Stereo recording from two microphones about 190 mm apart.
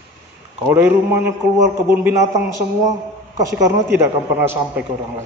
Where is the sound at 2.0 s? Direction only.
15° right (ahead or behind).